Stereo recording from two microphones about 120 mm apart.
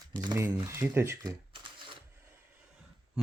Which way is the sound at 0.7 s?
20° right (ahead or behind).